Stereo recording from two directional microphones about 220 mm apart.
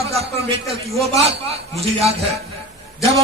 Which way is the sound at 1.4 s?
25° right (ahead or behind).